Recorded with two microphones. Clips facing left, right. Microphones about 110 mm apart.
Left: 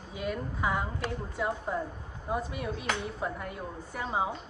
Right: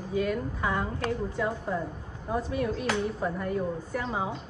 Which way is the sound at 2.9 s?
Centre (ahead or behind).